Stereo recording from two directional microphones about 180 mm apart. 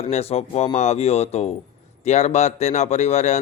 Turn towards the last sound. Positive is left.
turn(degrees=40)  # may be behind; listen again after turning